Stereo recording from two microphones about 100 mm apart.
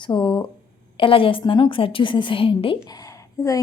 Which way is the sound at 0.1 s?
55° left (ahead or behind).